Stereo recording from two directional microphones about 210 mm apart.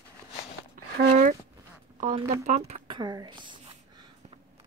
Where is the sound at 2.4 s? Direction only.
30° right (ahead or behind).